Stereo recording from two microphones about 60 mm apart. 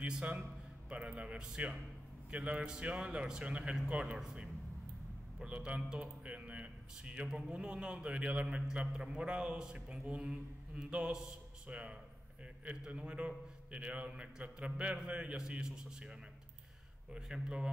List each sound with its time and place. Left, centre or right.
0.0 s a man's voice: centre